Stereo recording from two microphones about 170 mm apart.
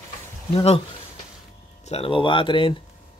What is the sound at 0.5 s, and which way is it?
Speech, 35° left (ahead or behind).